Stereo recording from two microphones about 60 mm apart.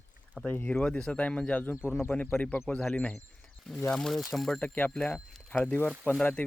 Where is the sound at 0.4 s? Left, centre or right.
Left.